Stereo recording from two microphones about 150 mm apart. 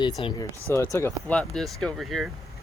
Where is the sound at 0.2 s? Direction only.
35° left (ahead or behind).